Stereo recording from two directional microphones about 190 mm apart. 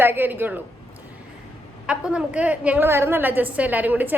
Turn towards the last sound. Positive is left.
turn(degrees=-10)  # may be behind; listen again after turning